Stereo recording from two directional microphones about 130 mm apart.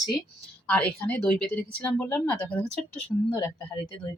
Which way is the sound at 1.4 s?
10° left (ahead or behind).